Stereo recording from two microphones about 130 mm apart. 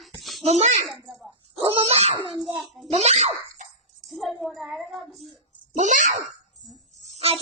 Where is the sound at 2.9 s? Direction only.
55° right (ahead or behind).